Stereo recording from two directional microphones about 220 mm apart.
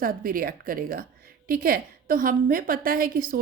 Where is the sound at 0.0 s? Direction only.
40° right (ahead or behind).